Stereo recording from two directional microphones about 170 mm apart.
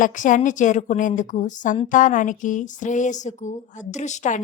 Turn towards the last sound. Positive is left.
turn(degrees=45)  # may be behind; listen again after turning